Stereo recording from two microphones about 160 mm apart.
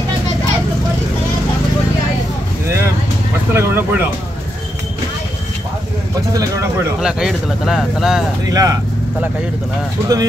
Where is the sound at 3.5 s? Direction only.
15° right (ahead or behind).